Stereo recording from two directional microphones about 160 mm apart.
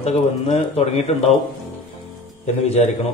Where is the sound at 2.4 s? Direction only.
45° left (ahead or behind).